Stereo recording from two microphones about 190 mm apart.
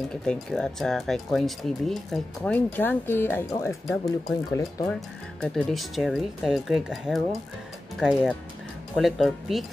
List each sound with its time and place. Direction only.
0.1 s speech: 5° left (ahead or behind)
5.4 s speech: centre (ahead or behind)